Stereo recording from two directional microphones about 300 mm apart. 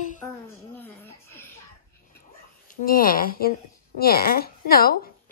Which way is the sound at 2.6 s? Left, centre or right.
Left.